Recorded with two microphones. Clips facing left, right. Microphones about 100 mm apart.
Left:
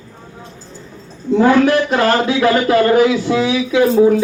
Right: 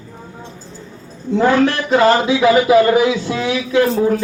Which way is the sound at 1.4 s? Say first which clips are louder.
Left 2 dB; centre (ahead or behind).